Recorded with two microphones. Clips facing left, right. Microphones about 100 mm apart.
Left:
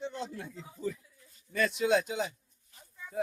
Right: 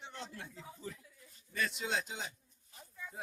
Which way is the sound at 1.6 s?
80° left.